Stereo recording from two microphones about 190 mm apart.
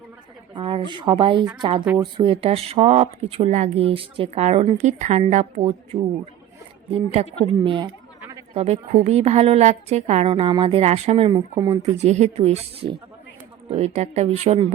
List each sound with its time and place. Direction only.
0.5 s a sound: 30° right (ahead or behind)
0.9 s speech: 25° right (ahead or behind)
8.2 s a sound: 15° right (ahead or behind)
8.5 s speech: 35° right (ahead or behind)
11.3 s speech: 20° right (ahead or behind)
11.9 s speech: 35° right (ahead or behind)